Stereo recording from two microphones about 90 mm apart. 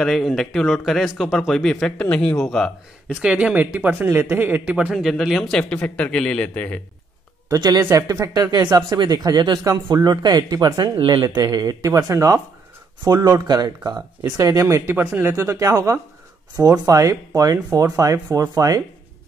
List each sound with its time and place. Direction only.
0.0 s speech: centre (ahead or behind)
3.2 s speech: 10° right (ahead or behind)
4.9 s a man's voice: centre (ahead or behind); by 6.8 s 15° left (ahead or behind)
7.9 s speech: 40° right (ahead or behind)
11.0 s speech: 90° right
11.3 s speech: 50° right (ahead or behind)
13.0 s speech: 45° right (ahead or behind)